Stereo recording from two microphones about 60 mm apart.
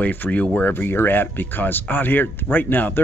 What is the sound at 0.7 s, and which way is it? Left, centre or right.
Speech, left.